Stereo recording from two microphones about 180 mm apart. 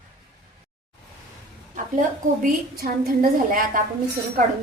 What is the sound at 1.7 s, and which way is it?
A woman's voice, 45° right (ahead or behind).